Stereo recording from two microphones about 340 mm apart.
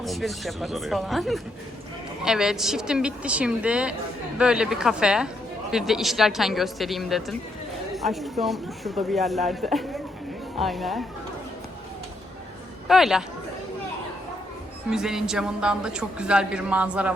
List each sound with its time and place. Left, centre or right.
0.0 s speech: centre
12.9 s speech: centre
14.8 s speech: centre